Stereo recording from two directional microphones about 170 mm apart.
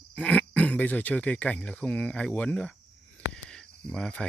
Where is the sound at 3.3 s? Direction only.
5° left (ahead or behind).